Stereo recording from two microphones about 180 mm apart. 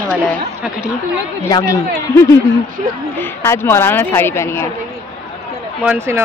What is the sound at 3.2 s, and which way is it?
A woman's voice, 10° left (ahead or behind).